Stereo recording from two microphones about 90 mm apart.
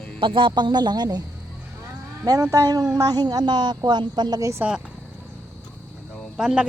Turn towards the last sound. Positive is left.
turn(degrees=-5)  # may be behind; listen again after turning